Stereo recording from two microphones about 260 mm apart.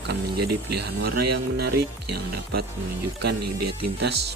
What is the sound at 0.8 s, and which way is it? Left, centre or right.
Speech, right.